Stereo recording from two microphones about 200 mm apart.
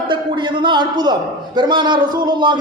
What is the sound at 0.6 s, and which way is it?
A man's voice, 20° right (ahead or behind).